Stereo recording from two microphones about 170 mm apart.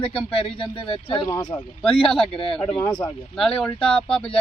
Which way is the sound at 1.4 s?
10° left (ahead or behind).